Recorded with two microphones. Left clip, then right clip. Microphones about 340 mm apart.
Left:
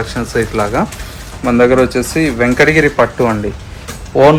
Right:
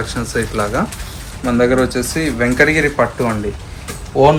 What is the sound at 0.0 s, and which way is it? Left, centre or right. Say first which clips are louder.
Speech: left 4 dB; left.